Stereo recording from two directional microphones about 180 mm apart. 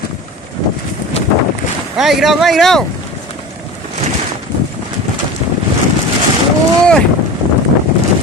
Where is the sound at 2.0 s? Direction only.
Centre (ahead or behind).